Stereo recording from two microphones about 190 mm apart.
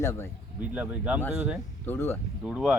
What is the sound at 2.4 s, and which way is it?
Speech, 5° right (ahead or behind).